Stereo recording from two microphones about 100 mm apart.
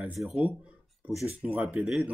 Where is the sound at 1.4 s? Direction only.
10° right (ahead or behind).